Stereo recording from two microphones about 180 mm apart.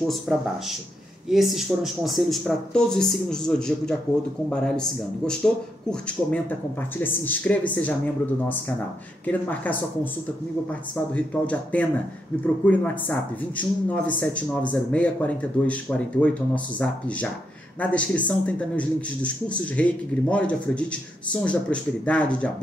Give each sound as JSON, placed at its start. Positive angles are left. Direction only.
{"t": 0.3, "sound": "speech", "side_deg": 0}
{"t": 9.2, "sound": "speech", "side_deg": 10}